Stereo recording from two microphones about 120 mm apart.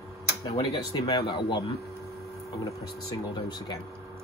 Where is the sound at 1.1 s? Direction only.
50° left (ahead or behind).